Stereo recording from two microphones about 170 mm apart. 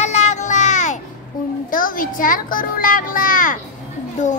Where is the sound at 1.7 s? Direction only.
55° left (ahead or behind).